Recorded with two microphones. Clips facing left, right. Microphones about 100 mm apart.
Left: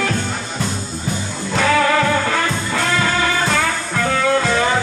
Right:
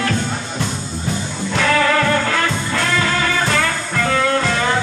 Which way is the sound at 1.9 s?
10° left (ahead or behind).